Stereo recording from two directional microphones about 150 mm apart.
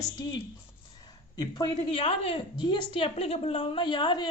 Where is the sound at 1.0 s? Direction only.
25° left (ahead or behind).